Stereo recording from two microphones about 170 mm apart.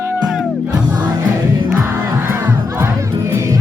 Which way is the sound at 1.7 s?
15° right (ahead or behind).